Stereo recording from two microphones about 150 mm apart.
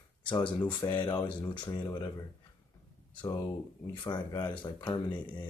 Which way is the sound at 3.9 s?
30° left (ahead or behind).